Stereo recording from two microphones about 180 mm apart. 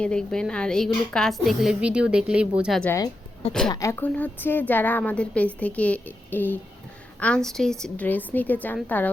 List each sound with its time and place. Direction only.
0.0 s a woman's voice: 5° left (ahead or behind)
2.8 s a woman's voice: 15° left (ahead or behind)